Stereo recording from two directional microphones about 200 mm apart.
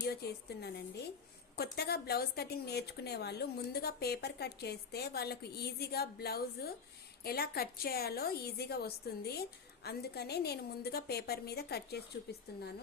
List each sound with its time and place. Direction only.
0.0 s a woman's voice: 55° left (ahead or behind)